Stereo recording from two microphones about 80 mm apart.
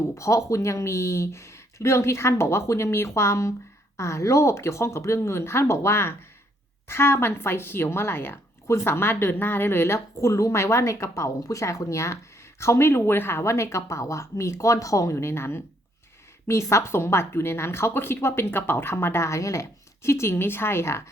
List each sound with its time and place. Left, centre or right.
0.1 s speech: left